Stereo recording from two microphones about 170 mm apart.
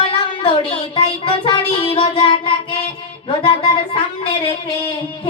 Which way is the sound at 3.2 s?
30° left (ahead or behind).